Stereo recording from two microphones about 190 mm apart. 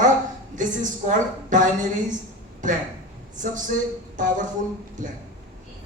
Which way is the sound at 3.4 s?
45° right (ahead or behind).